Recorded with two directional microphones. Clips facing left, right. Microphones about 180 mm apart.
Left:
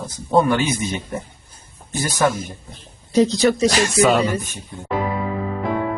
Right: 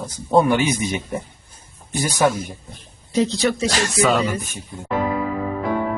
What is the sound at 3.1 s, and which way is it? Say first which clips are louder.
Speech: left 4 dB; 40° left (ahead or behind).